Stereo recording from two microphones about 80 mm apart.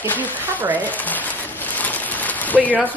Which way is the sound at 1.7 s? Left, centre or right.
Left.